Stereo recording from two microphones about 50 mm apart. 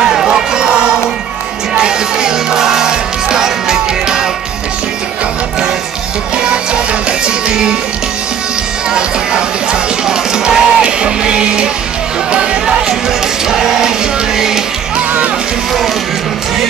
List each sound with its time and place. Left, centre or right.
0.0 s a sound: centre
1.8 s music: centre
6.3 s music: centre
8.9 s music: centre
13.5 s music: centre